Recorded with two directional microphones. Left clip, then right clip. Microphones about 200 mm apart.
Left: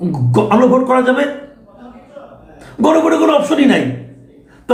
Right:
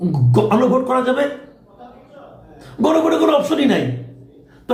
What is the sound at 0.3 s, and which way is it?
Speech, 5° left (ahead or behind).